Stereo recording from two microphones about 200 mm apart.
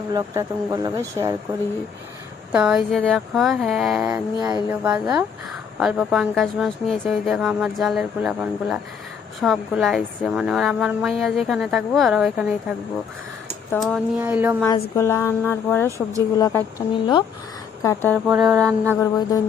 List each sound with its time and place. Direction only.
0.1 s speech: 15° right (ahead or behind)
2.5 s a woman's voice: 5° right (ahead or behind)
4.1 s a sound: 20° right (ahead or behind)
4.7 s a woman's voice: 5° right (ahead or behind)
13.7 s speech: centre (ahead or behind)
14.9 s a woman's voice: 15° left (ahead or behind)
18.9 s speech: 15° left (ahead or behind)